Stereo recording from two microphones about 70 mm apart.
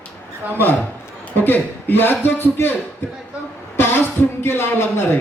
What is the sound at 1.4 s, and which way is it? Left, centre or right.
Speech, left.